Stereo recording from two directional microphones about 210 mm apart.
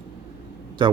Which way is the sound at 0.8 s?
20° right (ahead or behind).